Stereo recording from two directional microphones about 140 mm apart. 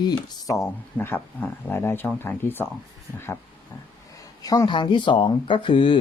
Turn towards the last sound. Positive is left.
turn(degrees=40)  # may be behind; listen again after turning